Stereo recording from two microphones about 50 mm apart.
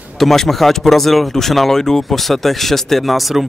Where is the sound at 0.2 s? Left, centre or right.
Centre.